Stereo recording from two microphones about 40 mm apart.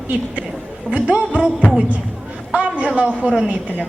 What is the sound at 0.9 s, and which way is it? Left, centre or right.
Speech, right.